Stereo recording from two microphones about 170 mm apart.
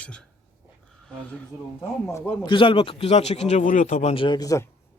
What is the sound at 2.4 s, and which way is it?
A man's voice, 30° left (ahead or behind).